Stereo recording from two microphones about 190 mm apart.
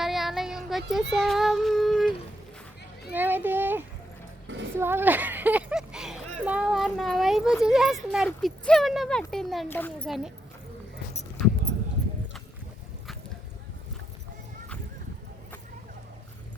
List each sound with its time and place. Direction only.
0.0 s child singing: centre (ahead or behind)
3.1 s a child's voice: 10° right (ahead or behind); by 10.1 s 10° left (ahead or behind)